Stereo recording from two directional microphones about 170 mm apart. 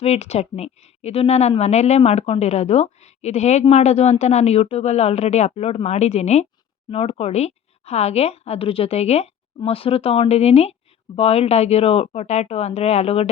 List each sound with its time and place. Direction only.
0.0 s speech: 40° left (ahead or behind)